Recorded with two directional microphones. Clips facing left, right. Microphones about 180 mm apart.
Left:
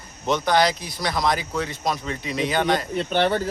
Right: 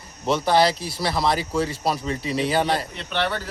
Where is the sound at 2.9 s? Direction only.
40° left (ahead or behind).